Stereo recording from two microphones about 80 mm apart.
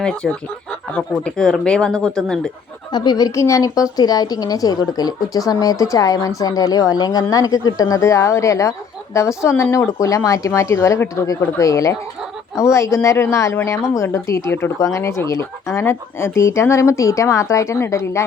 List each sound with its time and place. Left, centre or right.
0.0 s speech: centre
2.9 s speech: left
3.3 s speech: left
3.9 s a woman's voice: left